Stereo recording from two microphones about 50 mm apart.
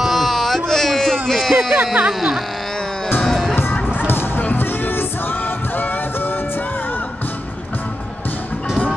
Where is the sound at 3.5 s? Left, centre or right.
Left.